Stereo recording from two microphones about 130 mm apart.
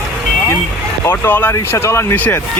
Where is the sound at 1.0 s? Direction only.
15° left (ahead or behind).